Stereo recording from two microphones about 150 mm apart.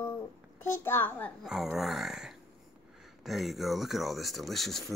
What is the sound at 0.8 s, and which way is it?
Speech, 15° left (ahead or behind).